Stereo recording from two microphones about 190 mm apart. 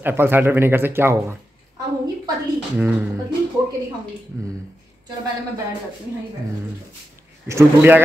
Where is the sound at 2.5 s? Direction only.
10° right (ahead or behind).